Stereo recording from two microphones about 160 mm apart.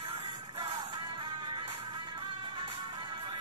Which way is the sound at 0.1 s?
35° right (ahead or behind).